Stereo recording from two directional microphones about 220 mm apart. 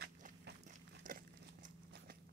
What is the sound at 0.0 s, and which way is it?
Walk, 50° right (ahead or behind).